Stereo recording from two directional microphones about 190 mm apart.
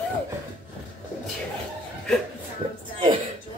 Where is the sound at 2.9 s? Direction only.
25° right (ahead or behind).